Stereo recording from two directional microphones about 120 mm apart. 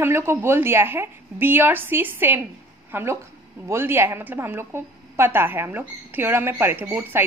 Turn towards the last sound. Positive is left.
turn(degrees=-15)  # may be behind; listen again after turning